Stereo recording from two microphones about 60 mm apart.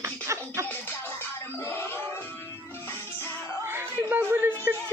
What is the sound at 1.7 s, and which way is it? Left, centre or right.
Music, left.